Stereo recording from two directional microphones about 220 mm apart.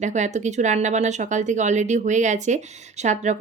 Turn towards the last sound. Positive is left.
turn(degrees=-30)  # may be behind; listen again after turning